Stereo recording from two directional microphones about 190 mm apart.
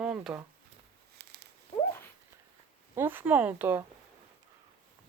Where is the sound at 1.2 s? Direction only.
60° right (ahead or behind).